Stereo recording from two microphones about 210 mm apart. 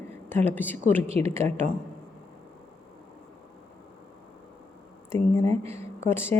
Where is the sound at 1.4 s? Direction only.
30° right (ahead or behind).